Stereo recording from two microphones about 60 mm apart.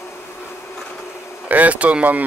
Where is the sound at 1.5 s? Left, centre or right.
Right.